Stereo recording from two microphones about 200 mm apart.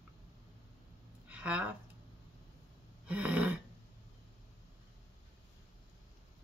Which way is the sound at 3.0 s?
5° right (ahead or behind).